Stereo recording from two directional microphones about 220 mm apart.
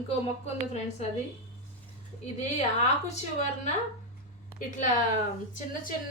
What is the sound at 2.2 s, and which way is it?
Speech, 30° left (ahead or behind).